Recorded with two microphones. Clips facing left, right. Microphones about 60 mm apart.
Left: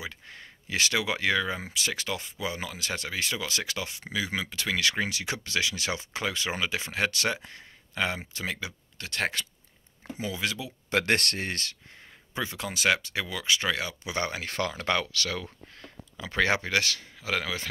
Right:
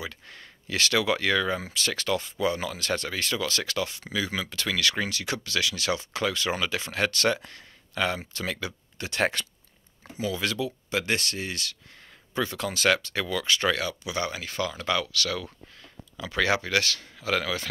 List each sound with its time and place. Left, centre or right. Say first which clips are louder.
0.0 s speech: right 2 dB; centre
8.9 s speech: right 5 dB; centre
10.2 s speech: right 4 dB; centre
10.9 s speech: left 5 dB; left
12.4 s speech: right 4 dB; centre
14.0 s speech: right 1 dB; left
15.0 s speech: right 2 dB; left